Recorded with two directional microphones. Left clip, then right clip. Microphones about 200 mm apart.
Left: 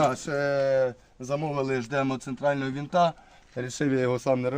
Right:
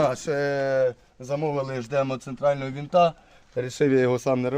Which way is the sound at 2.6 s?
20° right (ahead or behind).